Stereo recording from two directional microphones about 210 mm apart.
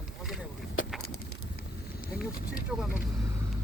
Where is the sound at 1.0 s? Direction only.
90° left.